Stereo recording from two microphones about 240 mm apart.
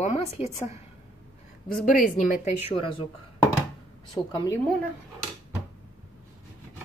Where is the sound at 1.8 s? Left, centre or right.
Left.